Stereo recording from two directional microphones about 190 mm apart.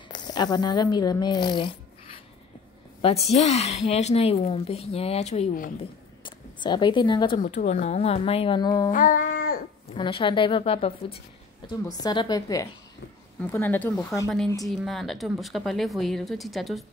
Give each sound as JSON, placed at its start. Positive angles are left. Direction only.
{"t": 0.1, "sound": "a woman's voice", "side_deg": 20}
{"t": 6.2, "sound": "speech", "side_deg": 25}
{"t": 7.3, "sound": "a woman's voice", "side_deg": 40}
{"t": 8.9, "sound": "child singing", "side_deg": 45}
{"t": 9.9, "sound": "a woman's voice", "side_deg": 25}
{"t": 11.6, "sound": "a woman's voice", "side_deg": 20}
{"t": 14.7, "sound": "speech", "side_deg": 0}